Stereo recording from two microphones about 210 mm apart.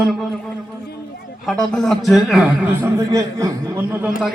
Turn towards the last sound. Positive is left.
turn(degrees=-10)  # may be behind; listen again after turning